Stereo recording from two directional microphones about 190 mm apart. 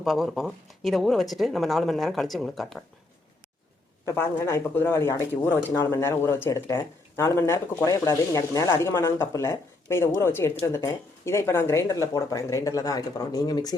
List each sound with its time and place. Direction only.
0.0 s speech: centre (ahead or behind)
4.0 s speech: 15° left (ahead or behind)